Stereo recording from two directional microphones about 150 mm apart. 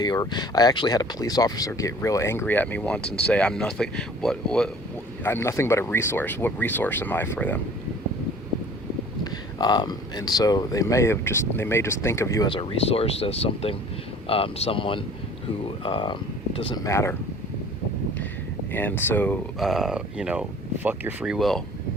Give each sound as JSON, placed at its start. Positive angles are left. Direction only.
{"t": 0.0, "sound": "speech", "side_deg": 25}
{"t": 5.2, "sound": "speech", "side_deg": 15}
{"t": 9.2, "sound": "speech", "side_deg": 25}
{"t": 12.5, "sound": "speech", "side_deg": 40}
{"t": 16.8, "sound": "speech", "side_deg": 20}
{"t": 18.7, "sound": "speech", "side_deg": 10}
{"t": 19.5, "sound": "speech", "side_deg": 0}
{"t": 21.3, "sound": "speech", "side_deg": 0}